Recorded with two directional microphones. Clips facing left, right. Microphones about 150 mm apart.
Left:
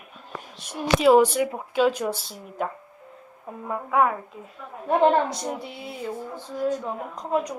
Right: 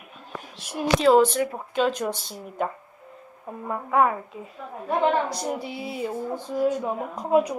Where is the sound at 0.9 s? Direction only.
10° left (ahead or behind).